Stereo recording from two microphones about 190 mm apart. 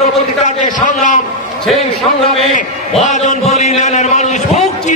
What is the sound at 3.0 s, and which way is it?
A man's voice, 40° left (ahead or behind).